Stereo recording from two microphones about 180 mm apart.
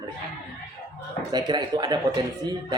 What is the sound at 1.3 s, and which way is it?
Speech, 20° right (ahead or behind).